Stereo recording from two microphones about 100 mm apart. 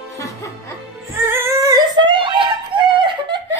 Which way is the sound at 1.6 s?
40° right (ahead or behind).